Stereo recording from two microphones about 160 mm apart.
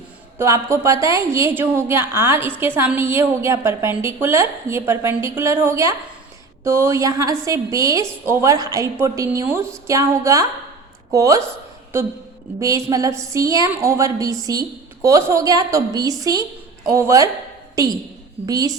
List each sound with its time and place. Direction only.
0.3 s a woman's voice: 15° right (ahead or behind)
12.5 s a woman's voice: 20° right (ahead or behind)